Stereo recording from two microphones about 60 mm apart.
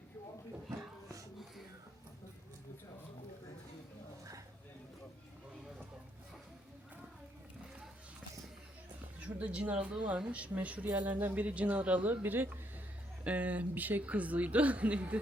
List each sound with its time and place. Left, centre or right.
9.2 s speech: right